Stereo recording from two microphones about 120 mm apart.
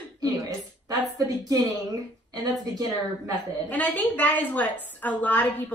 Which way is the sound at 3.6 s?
10° left (ahead or behind).